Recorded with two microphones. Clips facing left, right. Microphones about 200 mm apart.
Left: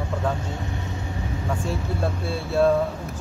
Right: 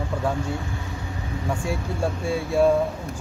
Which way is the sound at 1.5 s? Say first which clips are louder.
Right 1 dB; 15° right (ahead or behind).